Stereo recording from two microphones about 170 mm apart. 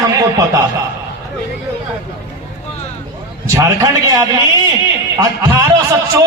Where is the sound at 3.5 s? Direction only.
20° right (ahead or behind).